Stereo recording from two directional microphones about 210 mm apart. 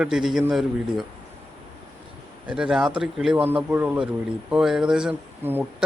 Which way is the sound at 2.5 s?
5° right (ahead or behind).